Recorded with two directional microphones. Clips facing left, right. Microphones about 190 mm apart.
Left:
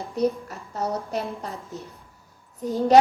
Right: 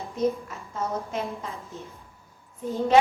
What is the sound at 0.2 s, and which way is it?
A woman's voice, 40° left (ahead or behind).